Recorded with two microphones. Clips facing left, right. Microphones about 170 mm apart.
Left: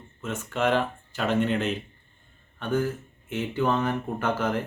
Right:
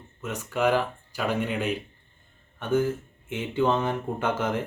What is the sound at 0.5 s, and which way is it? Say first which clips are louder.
Speech: right 1 dB; 10° right (ahead or behind).